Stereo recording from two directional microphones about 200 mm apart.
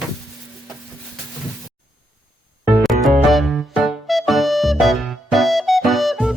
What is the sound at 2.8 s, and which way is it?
Music, centre (ahead or behind).